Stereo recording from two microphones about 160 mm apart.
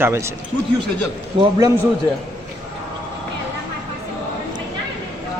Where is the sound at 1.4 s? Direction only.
30° right (ahead or behind).